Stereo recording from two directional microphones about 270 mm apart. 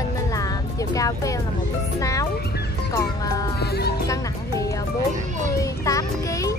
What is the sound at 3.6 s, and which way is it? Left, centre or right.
Music, left.